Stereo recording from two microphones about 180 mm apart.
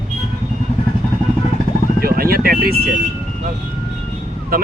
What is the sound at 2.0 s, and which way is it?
Vehicle, 55° right (ahead or behind).